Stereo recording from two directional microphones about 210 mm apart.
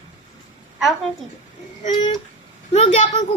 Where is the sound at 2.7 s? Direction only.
30° left (ahead or behind).